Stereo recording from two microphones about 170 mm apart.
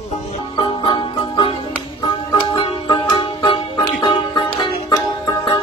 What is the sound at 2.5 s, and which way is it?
Music, 30° left (ahead or behind).